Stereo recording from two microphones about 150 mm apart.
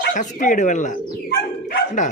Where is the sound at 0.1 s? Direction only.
60° left (ahead or behind).